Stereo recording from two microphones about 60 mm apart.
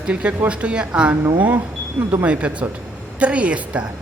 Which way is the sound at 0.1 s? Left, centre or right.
Right.